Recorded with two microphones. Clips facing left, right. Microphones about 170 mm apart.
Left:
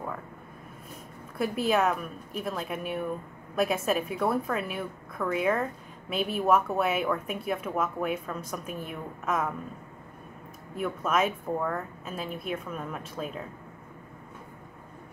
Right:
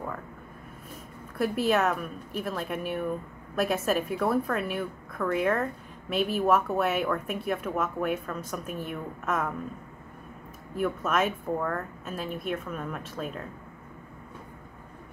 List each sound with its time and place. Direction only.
1.4 s a woman's voice: centre (ahead or behind)
10.8 s a woman's voice: centre (ahead or behind)